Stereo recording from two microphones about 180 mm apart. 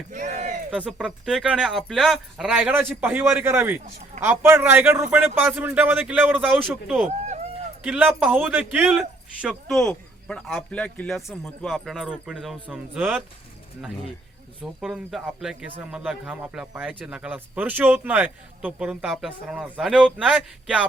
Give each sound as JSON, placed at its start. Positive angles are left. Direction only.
{"t": 0.1, "sound": "a sound", "side_deg": -45}
{"t": 0.7, "sound": "speech", "side_deg": -5}
{"t": 14.6, "sound": "speech", "side_deg": 0}